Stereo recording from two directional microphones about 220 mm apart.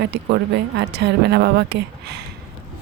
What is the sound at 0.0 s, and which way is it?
Speech, 50° right (ahead or behind).